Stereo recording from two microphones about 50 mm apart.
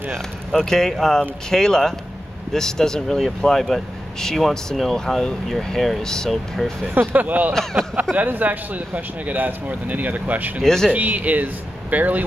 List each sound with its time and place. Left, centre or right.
0.1 s speech: centre
6.9 s speech: right
7.2 s speech: right
10.6 s speech: centre
10.9 s speech: right